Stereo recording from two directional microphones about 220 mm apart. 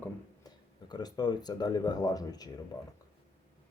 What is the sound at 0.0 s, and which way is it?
Speech, 20° left (ahead or behind).